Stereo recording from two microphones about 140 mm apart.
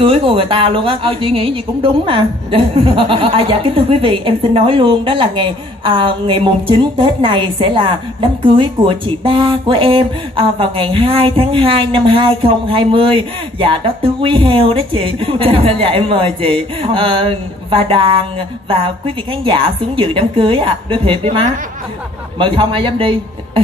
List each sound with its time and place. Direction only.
0.0 s a woman's voice: 40° right (ahead or behind)